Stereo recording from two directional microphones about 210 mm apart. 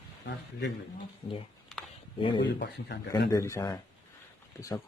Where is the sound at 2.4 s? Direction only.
55° left (ahead or behind).